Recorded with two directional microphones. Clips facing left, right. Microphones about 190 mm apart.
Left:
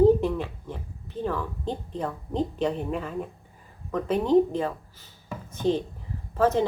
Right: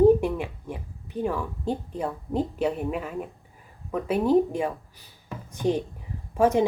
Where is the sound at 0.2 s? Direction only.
10° right (ahead or behind).